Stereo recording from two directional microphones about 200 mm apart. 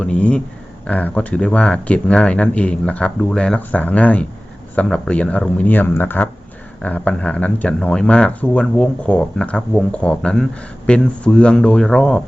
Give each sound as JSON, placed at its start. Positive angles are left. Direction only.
{"t": 0.0, "sound": "speech", "side_deg": 5}